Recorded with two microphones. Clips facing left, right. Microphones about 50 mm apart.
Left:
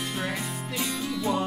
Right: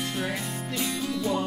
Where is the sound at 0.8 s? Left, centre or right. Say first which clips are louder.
Even; centre.